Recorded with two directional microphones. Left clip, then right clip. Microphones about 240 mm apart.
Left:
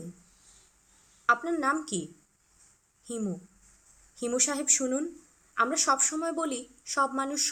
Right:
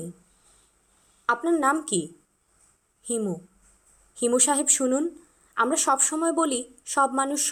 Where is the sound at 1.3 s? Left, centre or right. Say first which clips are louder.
Right 3 dB; centre.